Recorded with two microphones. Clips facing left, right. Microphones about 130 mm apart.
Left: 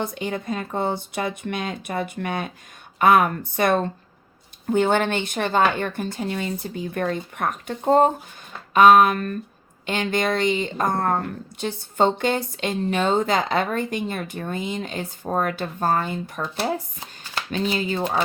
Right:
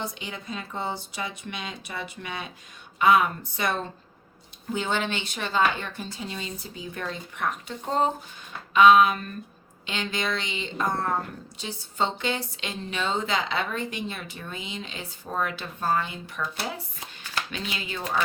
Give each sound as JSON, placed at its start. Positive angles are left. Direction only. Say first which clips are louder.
{"t": 0.0, "sound": "a woman's voice", "louder": "left 8 dB", "side_deg": 50}